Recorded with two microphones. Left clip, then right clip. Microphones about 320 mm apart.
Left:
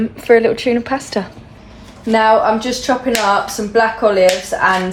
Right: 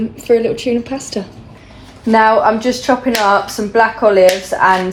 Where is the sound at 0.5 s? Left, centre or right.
Centre.